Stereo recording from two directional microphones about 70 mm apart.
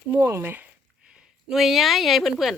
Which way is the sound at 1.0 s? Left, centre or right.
Centre.